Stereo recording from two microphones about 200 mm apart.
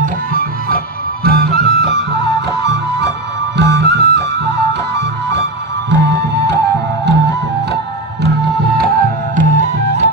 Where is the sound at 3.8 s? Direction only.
55° right (ahead or behind).